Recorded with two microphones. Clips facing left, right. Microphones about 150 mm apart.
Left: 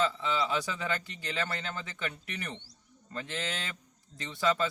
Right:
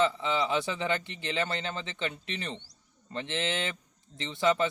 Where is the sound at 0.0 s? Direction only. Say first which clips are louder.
Right 3 dB; 25° right (ahead or behind).